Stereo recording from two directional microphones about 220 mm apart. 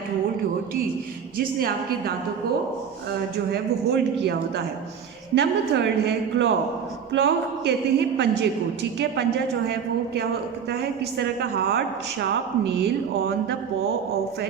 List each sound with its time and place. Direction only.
1.5 s a woman's voice: 40° right (ahead or behind)
3.5 s a woman's voice: 50° right (ahead or behind)
10.7 s a woman's voice: 45° right (ahead or behind)